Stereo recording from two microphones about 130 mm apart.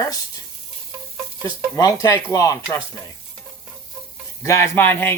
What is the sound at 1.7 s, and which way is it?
Speech, 25° left (ahead or behind).